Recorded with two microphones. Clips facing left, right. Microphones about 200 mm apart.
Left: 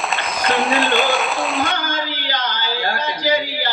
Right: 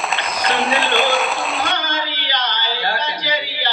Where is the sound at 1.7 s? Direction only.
50° left (ahead or behind).